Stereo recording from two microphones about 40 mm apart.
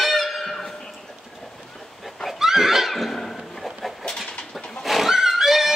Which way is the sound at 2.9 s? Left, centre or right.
Centre.